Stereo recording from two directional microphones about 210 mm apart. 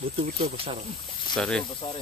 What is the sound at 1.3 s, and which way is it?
Speech, 5° left (ahead or behind).